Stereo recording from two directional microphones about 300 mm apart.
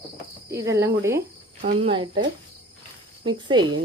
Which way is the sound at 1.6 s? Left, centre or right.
Right.